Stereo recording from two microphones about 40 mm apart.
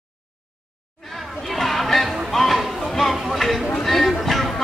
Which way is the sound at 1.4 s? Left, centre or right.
Centre.